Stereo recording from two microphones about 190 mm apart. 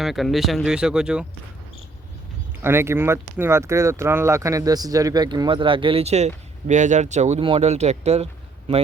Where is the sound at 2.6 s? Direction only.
15° right (ahead or behind).